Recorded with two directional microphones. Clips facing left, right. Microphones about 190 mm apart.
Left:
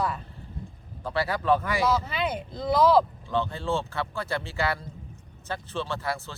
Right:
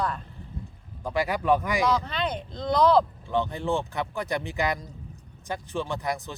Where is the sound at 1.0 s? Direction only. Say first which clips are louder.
Right 1 dB; 15° right (ahead or behind).